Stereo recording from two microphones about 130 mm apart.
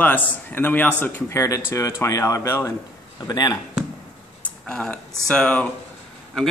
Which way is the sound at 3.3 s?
35° left (ahead or behind).